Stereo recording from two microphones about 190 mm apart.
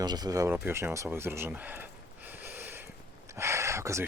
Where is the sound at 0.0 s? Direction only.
20° right (ahead or behind).